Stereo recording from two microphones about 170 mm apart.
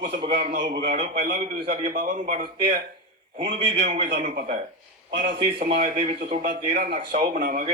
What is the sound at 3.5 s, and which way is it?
A man's voice, 85° right.